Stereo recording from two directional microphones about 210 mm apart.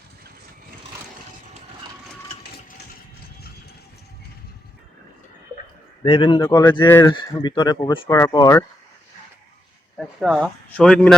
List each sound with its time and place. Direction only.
6.0 s speech: 25° left (ahead or behind)
10.0 s speech: centre (ahead or behind)